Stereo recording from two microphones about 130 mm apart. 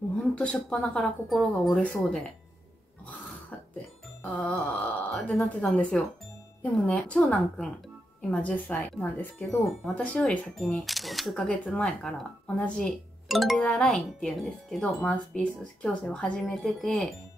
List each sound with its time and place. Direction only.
0.1 s speech: 10° left (ahead or behind)
4.2 s speech: 10° left (ahead or behind)